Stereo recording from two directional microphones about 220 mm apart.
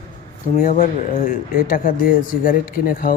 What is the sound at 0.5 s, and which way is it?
Speech, 35° left (ahead or behind).